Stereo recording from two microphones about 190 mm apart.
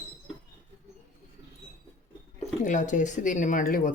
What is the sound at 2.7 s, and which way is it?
Speech, 40° left (ahead or behind).